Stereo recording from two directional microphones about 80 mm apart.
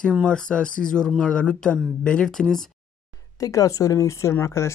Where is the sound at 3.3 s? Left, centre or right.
Left.